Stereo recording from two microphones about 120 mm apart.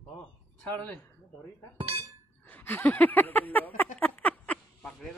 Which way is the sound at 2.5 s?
15° left (ahead or behind).